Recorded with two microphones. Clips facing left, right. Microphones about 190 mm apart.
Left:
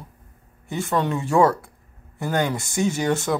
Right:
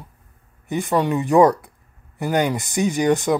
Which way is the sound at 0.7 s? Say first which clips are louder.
Right 3 dB; 15° right (ahead or behind).